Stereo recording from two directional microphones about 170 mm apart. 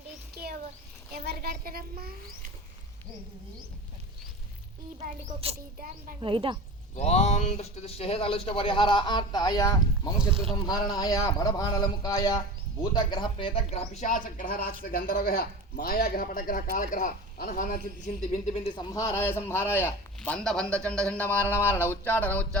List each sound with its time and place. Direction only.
1.2 s a child's voice: 70° right (ahead or behind)
4.9 s speech: 40° right (ahead or behind)
6.9 s speech: 40° left (ahead or behind); by 17.7 s 55° left (ahead or behind)
18.0 s a man's voice: 40° left (ahead or behind); by 22.4 s 10° left (ahead or behind)